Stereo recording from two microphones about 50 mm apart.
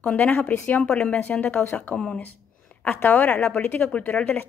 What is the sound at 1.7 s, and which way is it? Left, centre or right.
Speech, left.